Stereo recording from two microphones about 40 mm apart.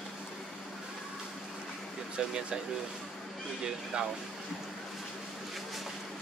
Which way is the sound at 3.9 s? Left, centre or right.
Right.